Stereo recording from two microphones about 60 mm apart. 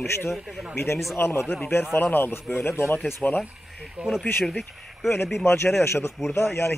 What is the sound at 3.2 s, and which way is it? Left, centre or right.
Speech, left.